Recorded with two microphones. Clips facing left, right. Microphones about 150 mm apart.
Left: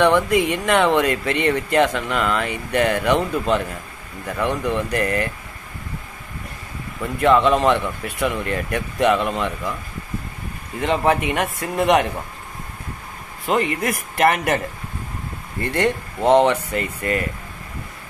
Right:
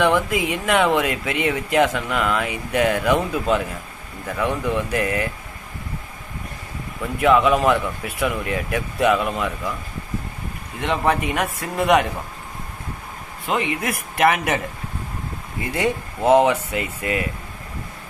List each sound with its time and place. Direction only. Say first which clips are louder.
0.0 s speech: left 3 dB; centre (ahead or behind)
7.0 s speech: left 1 dB; 5° right (ahead or behind)
10.8 s speech: left 2 dB; centre (ahead or behind)
13.5 s speech: left 3 dB; centre (ahead or behind)
15.6 s speech: left 2 dB; 5° right (ahead or behind)